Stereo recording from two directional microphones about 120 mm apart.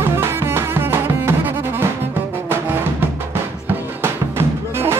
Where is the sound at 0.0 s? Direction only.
20° right (ahead or behind).